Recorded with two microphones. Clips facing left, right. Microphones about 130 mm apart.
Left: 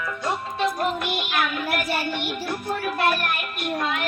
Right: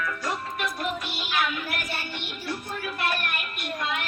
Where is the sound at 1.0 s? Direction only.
65° left (ahead or behind).